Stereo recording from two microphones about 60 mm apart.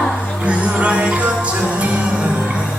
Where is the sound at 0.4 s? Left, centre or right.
Right.